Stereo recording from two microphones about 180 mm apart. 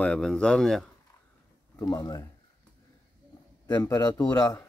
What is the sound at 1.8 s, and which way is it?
Speech, 20° left (ahead or behind).